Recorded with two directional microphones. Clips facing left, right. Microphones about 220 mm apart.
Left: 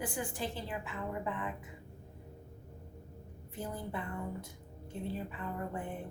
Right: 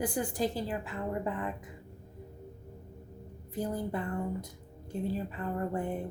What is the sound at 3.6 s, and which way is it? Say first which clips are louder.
Speech: right 7 dB; 40° right (ahead or behind).